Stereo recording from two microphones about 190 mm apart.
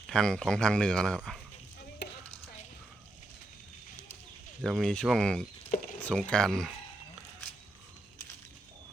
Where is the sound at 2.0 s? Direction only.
65° left (ahead or behind).